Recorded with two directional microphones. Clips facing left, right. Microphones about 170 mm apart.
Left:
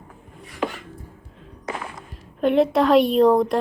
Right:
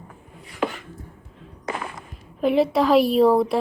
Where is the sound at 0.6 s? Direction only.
75° right (ahead or behind).